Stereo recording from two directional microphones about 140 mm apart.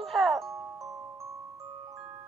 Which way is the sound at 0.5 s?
20° right (ahead or behind).